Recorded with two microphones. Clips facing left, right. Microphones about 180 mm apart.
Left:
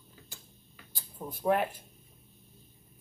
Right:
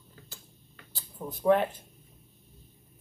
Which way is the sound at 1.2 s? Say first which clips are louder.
Right 4 dB; 10° left (ahead or behind).